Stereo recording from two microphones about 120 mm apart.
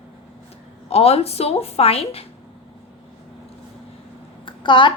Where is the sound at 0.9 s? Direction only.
55° left (ahead or behind).